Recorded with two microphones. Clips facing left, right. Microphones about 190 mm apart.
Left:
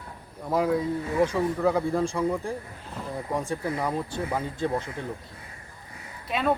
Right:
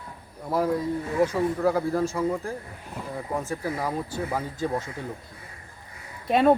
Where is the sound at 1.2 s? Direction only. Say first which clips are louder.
Right 1 dB; 5° right (ahead or behind).